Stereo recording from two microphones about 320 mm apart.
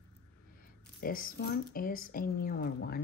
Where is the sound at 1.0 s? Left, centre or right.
Left.